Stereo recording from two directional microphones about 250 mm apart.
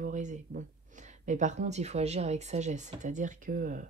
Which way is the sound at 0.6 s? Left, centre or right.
Right.